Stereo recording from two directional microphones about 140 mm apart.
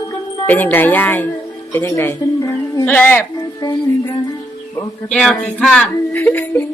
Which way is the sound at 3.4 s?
25° left (ahead or behind).